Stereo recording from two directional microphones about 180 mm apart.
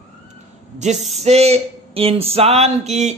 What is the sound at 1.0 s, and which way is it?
Speech, centre (ahead or behind).